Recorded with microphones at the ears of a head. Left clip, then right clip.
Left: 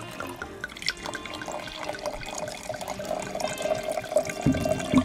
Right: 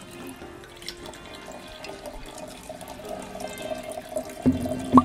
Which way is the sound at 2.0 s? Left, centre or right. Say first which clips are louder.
Left 6 dB; left.